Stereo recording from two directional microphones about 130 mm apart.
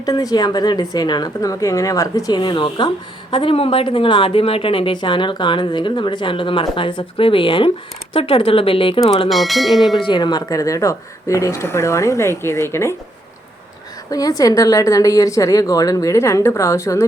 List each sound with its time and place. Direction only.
0.0 s a woman's voice: 30° left (ahead or behind); by 9.3 s 45° left (ahead or behind)
9.3 s speech: centre (ahead or behind)
10.0 s speech: 35° left (ahead or behind); by 13.0 s 20° left (ahead or behind)
14.1 s speech: 30° left (ahead or behind)